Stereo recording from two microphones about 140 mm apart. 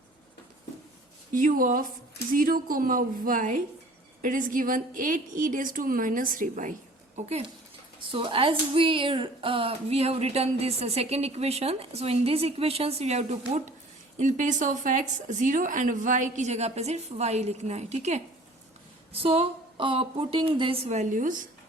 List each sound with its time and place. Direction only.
1.3 s a woman's voice: 75° right (ahead or behind)
2.3 s a woman's voice: 85° right; by 6.7 s 70° right (ahead or behind)
7.2 s speech: 50° right (ahead or behind)
8.1 s a woman's voice: 40° right (ahead or behind)
20.8 s speech: 55° right (ahead or behind)